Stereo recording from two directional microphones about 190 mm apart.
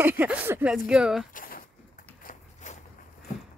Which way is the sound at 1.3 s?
50° left (ahead or behind).